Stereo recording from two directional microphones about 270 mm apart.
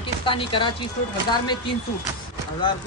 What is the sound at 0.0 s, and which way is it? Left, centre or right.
Chopping, centre.